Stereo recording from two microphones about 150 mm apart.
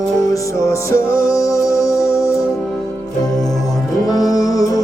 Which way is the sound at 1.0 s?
70° right (ahead or behind).